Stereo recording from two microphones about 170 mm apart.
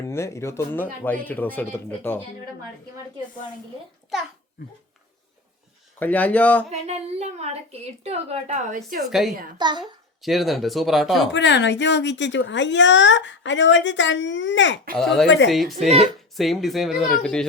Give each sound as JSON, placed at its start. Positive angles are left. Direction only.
{"t": 0.0, "sound": "speech", "side_deg": 15}
{"t": 6.0, "sound": "speech", "side_deg": 10}
{"t": 6.7, "sound": "a woman's voice", "side_deg": -40}
{"t": 9.0, "sound": "speech", "side_deg": 0}
{"t": 9.6, "sound": "a woman's voice", "side_deg": -25}
{"t": 10.2, "sound": "speech", "side_deg": 0}
{"t": 11.3, "sound": "speech", "side_deg": 90}
{"t": 14.9, "sound": "speech", "side_deg": 0}
{"t": 15.9, "sound": "a woman's voice", "side_deg": -35}
{"t": 16.4, "sound": "speech", "side_deg": 0}